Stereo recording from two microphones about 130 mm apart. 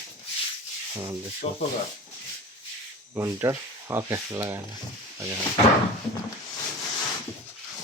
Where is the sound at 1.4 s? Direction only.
70° left (ahead or behind).